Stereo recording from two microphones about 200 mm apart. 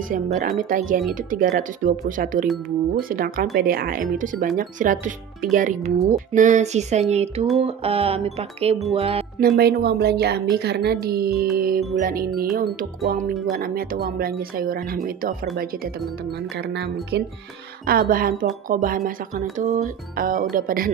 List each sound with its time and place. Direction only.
0.1 s a woman's voice: 40° right (ahead or behind)
9.4 s a woman's voice: 50° right (ahead or behind)
17.8 s a woman's voice: 45° right (ahead or behind)